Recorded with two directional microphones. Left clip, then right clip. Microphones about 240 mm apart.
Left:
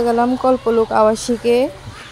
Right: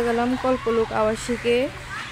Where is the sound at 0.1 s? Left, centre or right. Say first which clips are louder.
Left 7 dB; centre.